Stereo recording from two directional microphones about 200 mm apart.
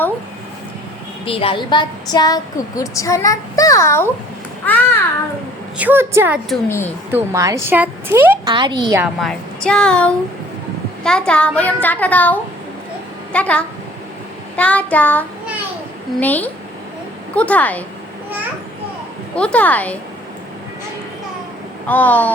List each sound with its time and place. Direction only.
1.2 s a woman's voice: 30° left (ahead or behind); by 4.9 s 10° left (ahead or behind)
5.7 s a woman's voice: 10° right (ahead or behind)
8.4 s speech: 20° right (ahead or behind)
9.1 s a woman's voice: 5° left (ahead or behind)
16.2 s a woman's voice: 10° left (ahead or behind)
19.4 s a woman's voice: 5° left (ahead or behind)
21.8 s a woman's voice: 10° left (ahead or behind)